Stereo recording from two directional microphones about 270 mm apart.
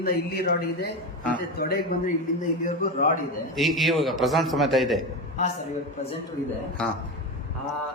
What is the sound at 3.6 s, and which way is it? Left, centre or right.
A man's voice, centre.